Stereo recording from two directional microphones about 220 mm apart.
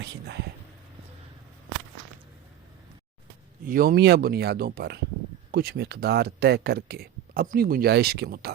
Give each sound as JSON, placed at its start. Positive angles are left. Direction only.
{"t": 0.0, "sound": "speech", "side_deg": -50}
{"t": 3.6, "sound": "speech", "side_deg": -40}